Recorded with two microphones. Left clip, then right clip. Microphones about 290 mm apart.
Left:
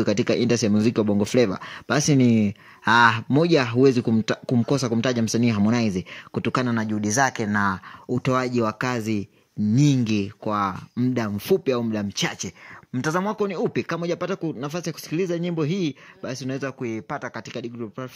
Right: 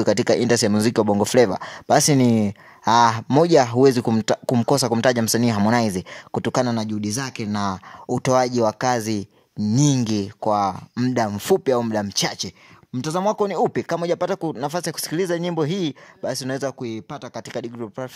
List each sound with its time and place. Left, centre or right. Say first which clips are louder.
0.0 s speech: right 4 dB; right; by 7.4 s centre
7.5 s speech: left 2 dB; centre
12.9 s speech: right 3 dB; centre
16.8 s speech: left 2 dB; centre
17.4 s speech: right 3 dB; right